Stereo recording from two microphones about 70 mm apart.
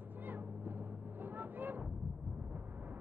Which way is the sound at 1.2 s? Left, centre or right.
Right.